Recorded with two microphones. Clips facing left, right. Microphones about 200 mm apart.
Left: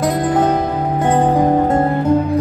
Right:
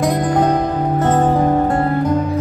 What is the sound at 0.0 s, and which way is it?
Music, 5° left (ahead or behind).